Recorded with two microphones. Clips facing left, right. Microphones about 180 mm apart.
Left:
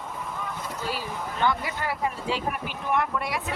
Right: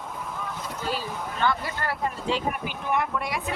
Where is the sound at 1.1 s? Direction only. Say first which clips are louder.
Even; centre (ahead or behind).